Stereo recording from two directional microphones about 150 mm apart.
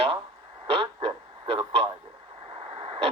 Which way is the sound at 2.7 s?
35° right (ahead or behind).